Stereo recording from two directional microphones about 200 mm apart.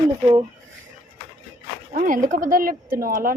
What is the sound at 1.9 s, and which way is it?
A woman's voice, 40° right (ahead or behind).